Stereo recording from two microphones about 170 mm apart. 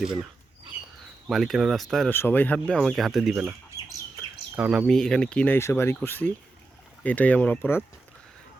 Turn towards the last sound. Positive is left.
turn(degrees=10)  # may be behind; listen again after turning